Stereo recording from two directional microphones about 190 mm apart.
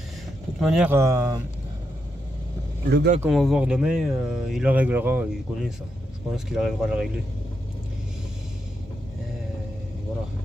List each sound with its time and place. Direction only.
0.6 s speech: 5° right (ahead or behind)
0.9 s speech: 15° right (ahead or behind)
2.9 s speech: 60° right (ahead or behind)
3.3 s speech: centre (ahead or behind)